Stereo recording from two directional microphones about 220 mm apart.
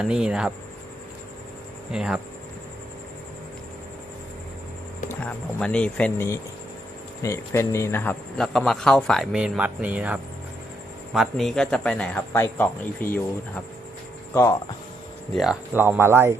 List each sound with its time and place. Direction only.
0.0 s speech: 5° right (ahead or behind)
1.9 s speech: 5° right (ahead or behind)
5.0 s speech: 5° left (ahead or behind)
15.3 s speech: centre (ahead or behind)